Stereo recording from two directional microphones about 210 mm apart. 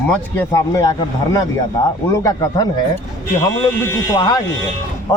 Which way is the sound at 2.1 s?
15° left (ahead or behind).